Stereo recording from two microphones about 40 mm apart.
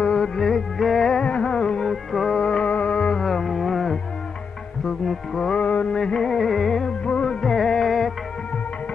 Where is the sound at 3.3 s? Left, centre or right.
Centre.